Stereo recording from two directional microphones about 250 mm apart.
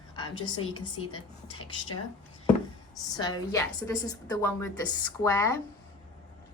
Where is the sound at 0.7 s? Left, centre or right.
Centre.